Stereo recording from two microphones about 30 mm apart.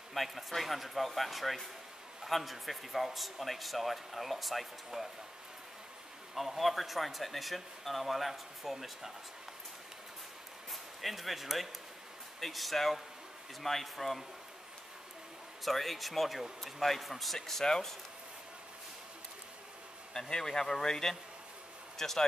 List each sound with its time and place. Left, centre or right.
0.1 s a man's voice: centre
6.3 s a man's voice: centre
10.7 s a man's voice: centre
15.6 s a man's voice: centre
20.2 s speech: centre